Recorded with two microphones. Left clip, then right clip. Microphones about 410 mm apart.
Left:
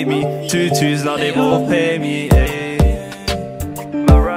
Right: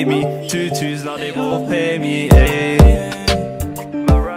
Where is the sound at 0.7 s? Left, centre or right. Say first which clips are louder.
Left 5 dB; left.